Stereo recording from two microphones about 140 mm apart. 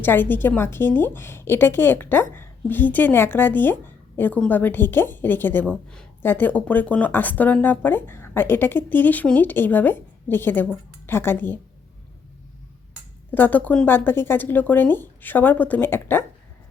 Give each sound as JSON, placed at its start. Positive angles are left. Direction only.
{"t": 0.0, "sound": "a woman's voice", "side_deg": 15}
{"t": 13.3, "sound": "a woman's voice", "side_deg": 15}